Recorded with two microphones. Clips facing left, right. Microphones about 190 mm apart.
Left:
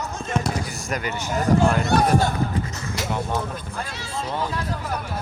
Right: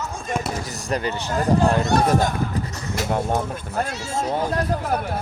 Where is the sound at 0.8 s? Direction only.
35° right (ahead or behind).